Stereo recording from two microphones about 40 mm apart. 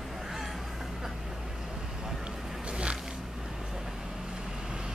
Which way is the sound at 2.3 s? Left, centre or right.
Centre.